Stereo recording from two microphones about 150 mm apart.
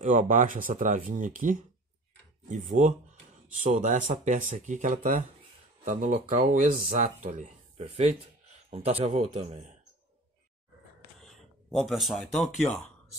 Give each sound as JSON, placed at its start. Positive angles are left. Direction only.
{"t": 0.0, "sound": "speech", "side_deg": -60}
{"t": 7.2, "sound": "speech", "side_deg": -45}
{"t": 11.2, "sound": "a sound", "side_deg": 0}